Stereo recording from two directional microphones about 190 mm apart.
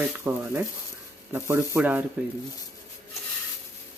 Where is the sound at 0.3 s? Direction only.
15° right (ahead or behind).